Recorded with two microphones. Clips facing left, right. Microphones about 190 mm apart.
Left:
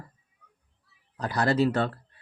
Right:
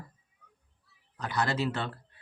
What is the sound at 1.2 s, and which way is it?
Speech, 35° left (ahead or behind).